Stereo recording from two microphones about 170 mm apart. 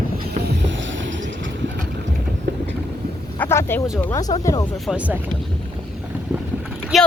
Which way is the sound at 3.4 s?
15° left (ahead or behind).